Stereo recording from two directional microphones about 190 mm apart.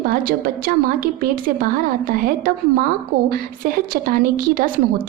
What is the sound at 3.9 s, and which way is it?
A woman's voice, 45° right (ahead or behind).